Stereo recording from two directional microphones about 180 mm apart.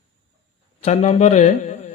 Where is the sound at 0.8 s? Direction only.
40° left (ahead or behind).